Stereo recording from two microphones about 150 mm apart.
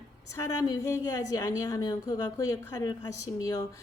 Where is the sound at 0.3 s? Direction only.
20° left (ahead or behind).